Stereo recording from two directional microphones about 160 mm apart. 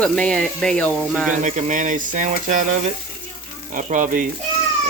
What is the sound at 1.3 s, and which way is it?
Speech, 50° right (ahead or behind).